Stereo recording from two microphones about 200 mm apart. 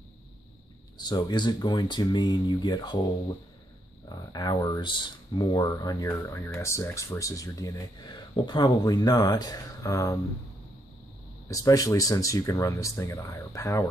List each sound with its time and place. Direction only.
0.9 s speech: 20° left (ahead or behind)
4.1 s speech: 20° left (ahead or behind)
11.4 s speech: 15° left (ahead or behind)